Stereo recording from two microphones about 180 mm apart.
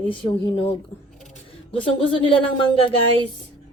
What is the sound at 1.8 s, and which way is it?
Speech, 30° left (ahead or behind).